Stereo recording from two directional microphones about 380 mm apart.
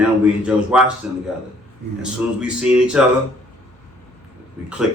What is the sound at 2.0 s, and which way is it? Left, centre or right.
Speech, centre.